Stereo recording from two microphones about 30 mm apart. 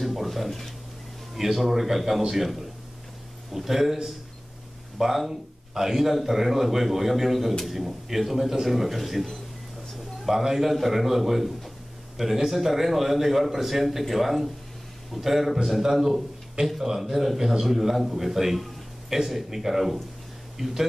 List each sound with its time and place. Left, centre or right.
0.0 s a sound: centre
0.5 s speech: centre
1.3 s a man's voice: centre
10.2 s speech: centre
12.2 s speech: right
12.5 s a man's voice: centre